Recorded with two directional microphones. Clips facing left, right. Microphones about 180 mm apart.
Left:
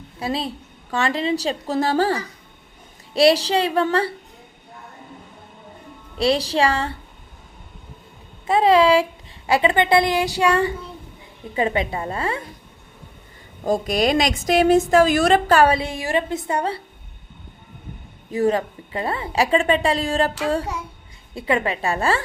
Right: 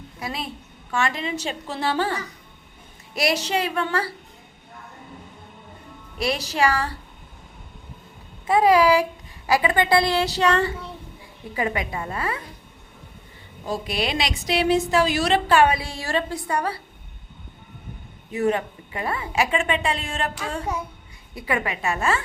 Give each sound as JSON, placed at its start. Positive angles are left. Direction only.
{"t": 0.2, "sound": "a woman's voice", "side_deg": 30}
{"t": 6.1, "sound": "a woman's voice", "side_deg": 30}
{"t": 8.4, "sound": "a woman's voice", "side_deg": 25}
{"t": 11.5, "sound": "a woman's voice", "side_deg": 25}
{"t": 13.7, "sound": "a woman's voice", "side_deg": 45}
{"t": 15.8, "sound": "a woman's voice", "side_deg": 20}
{"t": 18.3, "sound": "a woman's voice", "side_deg": 35}